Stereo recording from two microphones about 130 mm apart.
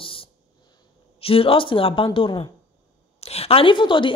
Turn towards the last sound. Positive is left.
turn(degrees=40)  # may be behind; listen again after turning